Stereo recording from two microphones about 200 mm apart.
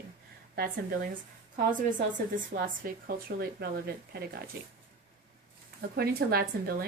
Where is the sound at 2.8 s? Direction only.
50° right (ahead or behind).